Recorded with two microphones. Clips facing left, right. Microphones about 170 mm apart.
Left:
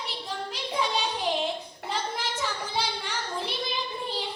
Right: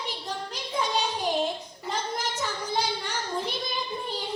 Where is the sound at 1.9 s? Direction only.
45° right (ahead or behind).